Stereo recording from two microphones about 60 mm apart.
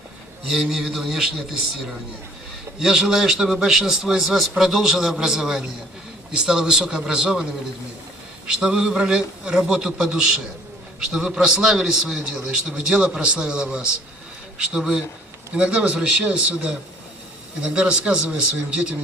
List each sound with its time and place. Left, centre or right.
0.6 s speech: centre
2.7 s a man's voice: centre
8.4 s a man's voice: centre